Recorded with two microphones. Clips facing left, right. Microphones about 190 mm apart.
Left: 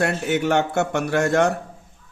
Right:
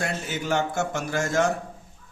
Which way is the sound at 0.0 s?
65° left (ahead or behind).